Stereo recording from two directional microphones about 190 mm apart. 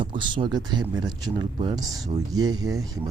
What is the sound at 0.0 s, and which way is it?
Speech, 25° right (ahead or behind).